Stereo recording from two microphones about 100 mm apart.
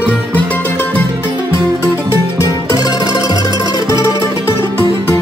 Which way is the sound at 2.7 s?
40° left (ahead or behind).